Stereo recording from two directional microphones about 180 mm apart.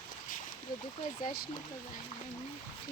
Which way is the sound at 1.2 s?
55° left (ahead or behind).